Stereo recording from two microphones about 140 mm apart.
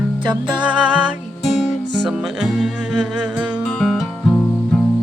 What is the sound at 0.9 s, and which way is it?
Music, 5° right (ahead or behind).